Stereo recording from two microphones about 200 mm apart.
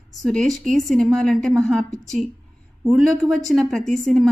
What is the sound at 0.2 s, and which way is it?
A woman's voice, centre (ahead or behind).